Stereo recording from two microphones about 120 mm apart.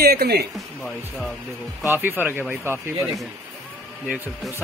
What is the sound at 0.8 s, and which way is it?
Speech, 5° left (ahead or behind).